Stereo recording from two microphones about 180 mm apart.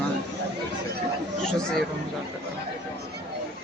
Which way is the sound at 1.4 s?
5° left (ahead or behind).